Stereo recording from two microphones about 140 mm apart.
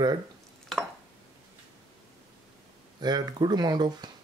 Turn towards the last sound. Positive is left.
turn(degrees=-30)  # may be behind; listen again after turning